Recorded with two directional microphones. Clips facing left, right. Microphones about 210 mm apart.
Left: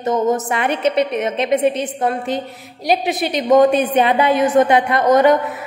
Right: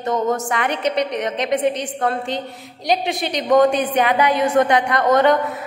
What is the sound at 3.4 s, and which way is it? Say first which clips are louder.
A woman's voice: left 2 dB; 20° left (ahead or behind).